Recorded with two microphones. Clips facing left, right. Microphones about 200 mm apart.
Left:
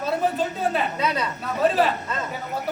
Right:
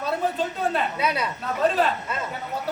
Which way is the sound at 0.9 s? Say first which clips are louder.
Left 1 dB; 10° right (ahead or behind).